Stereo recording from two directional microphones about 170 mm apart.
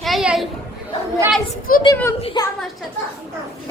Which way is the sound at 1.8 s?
20° left (ahead or behind).